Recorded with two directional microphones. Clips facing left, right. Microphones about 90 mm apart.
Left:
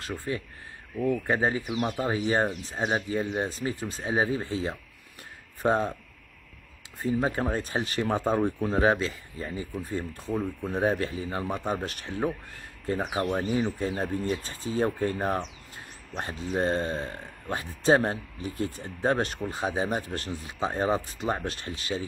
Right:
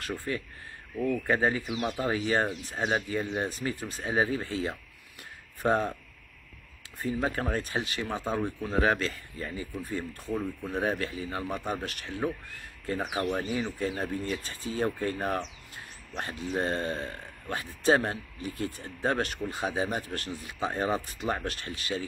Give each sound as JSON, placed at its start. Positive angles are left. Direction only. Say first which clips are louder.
{"t": 1.1, "sound": "speech", "louder": "right 1 dB", "side_deg": 20}
{"t": 7.0, "sound": "speech", "louder": "left 3 dB", "side_deg": 20}
{"t": 7.6, "sound": "speech", "louder": "left 4 dB", "side_deg": 35}
{"t": 8.9, "sound": "speech", "louder": "left 2 dB", "side_deg": 5}
{"t": 9.4, "sound": "speech", "louder": "left 2 dB", "side_deg": 25}
{"t": 10.3, "sound": "speech", "louder": "left 2 dB", "side_deg": 10}
{"t": 10.8, "sound": "speech", "louder": "left 4 dB", "side_deg": 30}